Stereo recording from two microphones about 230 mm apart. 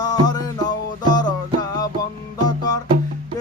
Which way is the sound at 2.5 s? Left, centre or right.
Centre.